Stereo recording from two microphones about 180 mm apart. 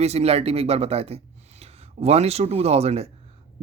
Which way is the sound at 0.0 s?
35° right (ahead or behind).